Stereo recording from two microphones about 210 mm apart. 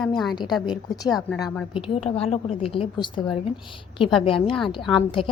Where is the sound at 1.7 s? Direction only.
25° left (ahead or behind).